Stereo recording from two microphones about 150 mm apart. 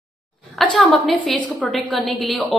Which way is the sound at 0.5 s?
5° left (ahead or behind).